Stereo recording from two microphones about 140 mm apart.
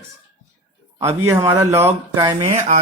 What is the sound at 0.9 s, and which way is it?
Speech, 20° right (ahead or behind).